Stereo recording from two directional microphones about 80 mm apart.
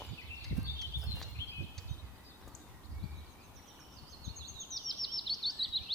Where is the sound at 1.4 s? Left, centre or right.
Left.